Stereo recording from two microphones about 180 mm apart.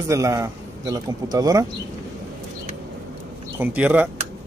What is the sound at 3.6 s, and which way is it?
Speech, 5° right (ahead or behind).